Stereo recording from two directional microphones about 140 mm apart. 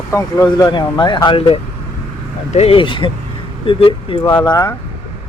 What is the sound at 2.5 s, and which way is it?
Speech, 45° left (ahead or behind).